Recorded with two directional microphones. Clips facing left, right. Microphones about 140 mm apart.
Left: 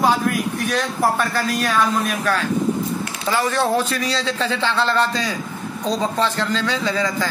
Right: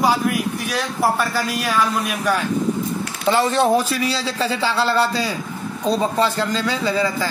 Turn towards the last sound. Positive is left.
turn(degrees=-10)  # may be behind; listen again after turning